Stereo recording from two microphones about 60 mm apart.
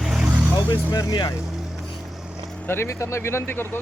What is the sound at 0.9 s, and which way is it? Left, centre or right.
Speech, left.